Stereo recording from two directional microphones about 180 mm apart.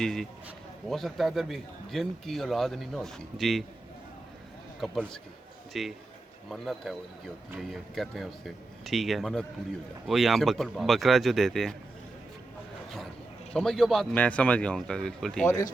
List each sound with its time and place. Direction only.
0.0 s a man's voice: 5° left (ahead or behind)
4.8 s a man's voice: 5° left (ahead or behind)
13.5 s a man's voice: centre (ahead or behind)